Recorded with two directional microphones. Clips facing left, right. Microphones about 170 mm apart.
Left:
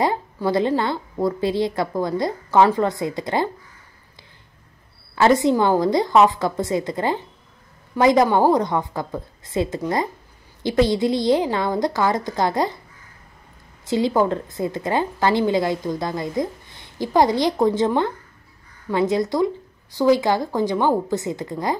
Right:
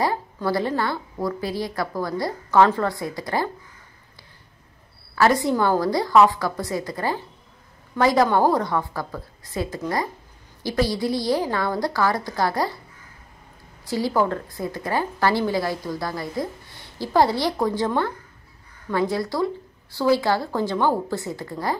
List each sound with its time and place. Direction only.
0.0 s a woman's voice: 20° left (ahead or behind)
5.1 s a woman's voice: 20° left (ahead or behind)
13.8 s a woman's voice: 20° left (ahead or behind)